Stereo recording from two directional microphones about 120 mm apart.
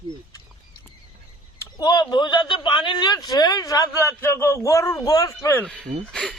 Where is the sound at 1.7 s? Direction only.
35° left (ahead or behind).